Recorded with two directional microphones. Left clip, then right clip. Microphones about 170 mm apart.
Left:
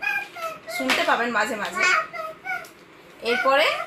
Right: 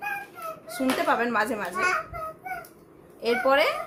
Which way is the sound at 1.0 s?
25° right (ahead or behind).